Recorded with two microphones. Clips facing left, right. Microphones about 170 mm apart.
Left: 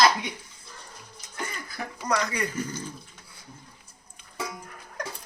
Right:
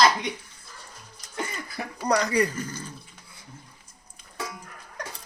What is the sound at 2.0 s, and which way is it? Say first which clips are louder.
Speech: right 5 dB; 35° right (ahead or behind).